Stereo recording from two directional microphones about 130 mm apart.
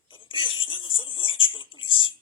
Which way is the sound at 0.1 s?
40° left (ahead or behind).